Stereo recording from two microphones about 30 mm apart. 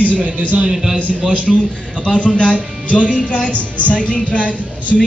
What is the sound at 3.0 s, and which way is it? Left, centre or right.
Speech, right.